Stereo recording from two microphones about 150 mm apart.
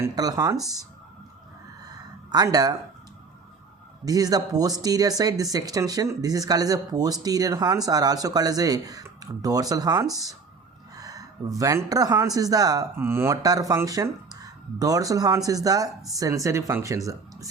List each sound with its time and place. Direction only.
0.0 s speech: 25° right (ahead or behind)
1.9 s a sound: 25° right (ahead or behind)
4.0 s speech: 25° right (ahead or behind)